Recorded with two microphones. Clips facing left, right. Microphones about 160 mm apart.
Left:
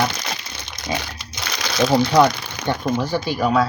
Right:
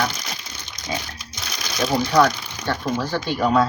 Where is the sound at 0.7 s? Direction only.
65° left (ahead or behind).